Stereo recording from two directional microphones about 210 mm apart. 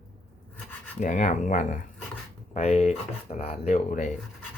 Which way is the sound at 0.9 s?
35° left (ahead or behind).